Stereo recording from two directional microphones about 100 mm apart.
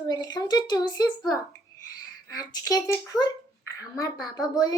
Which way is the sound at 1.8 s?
40° left (ahead or behind).